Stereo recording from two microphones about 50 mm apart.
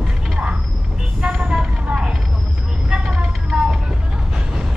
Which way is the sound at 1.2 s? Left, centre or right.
Centre.